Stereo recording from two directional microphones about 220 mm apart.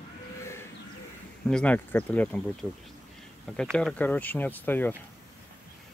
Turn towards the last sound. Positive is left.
turn(degrees=10)  # may be behind; listen again after turning